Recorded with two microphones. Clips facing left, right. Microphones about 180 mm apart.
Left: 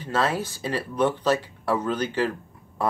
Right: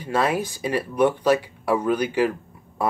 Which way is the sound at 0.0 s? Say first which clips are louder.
Right 2 dB; 15° right (ahead or behind).